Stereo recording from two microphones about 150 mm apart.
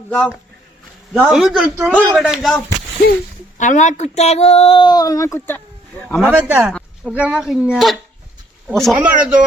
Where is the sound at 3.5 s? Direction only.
55° left (ahead or behind); by 5.6 s 15° left (ahead or behind).